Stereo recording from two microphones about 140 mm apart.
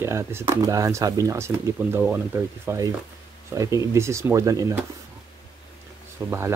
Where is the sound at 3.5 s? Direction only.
25° right (ahead or behind).